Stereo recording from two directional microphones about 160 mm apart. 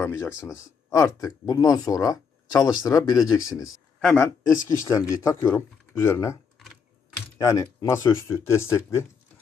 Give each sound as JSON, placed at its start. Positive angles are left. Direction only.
{"t": 0.0, "sound": "speech", "side_deg": 15}
{"t": 4.0, "sound": "speech", "side_deg": 5}
{"t": 4.8, "sound": "speech", "side_deg": 20}
{"t": 7.3, "sound": "speech", "side_deg": 20}